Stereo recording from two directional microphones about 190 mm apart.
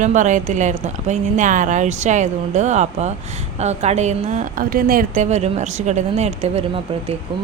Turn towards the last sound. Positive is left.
turn(degrees=-35)  # may be behind; listen again after turning